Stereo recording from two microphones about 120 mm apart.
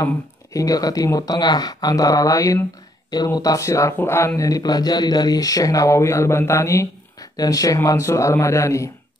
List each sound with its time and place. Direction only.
0.0 s speech: 30° left (ahead or behind)